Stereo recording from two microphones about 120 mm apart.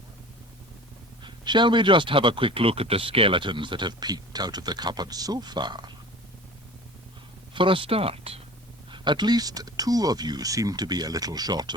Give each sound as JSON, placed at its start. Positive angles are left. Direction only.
{"t": 1.2, "sound": "speech", "side_deg": -40}
{"t": 7.5, "sound": "speech", "side_deg": -45}
{"t": 8.9, "sound": "speech", "side_deg": -40}